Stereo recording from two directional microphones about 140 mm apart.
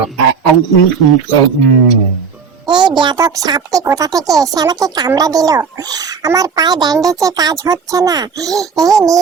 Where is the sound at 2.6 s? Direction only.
30° right (ahead or behind).